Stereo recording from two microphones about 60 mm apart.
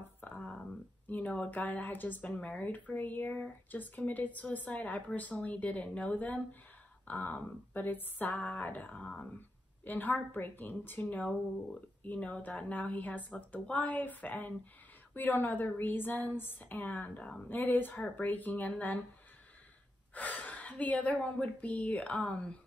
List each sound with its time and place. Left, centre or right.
0.2 s a sound: left
1.0 s a woman's voice: left
9.8 s a woman's voice: left
17.5 s a woman's voice: left
20.2 s a woman's voice: left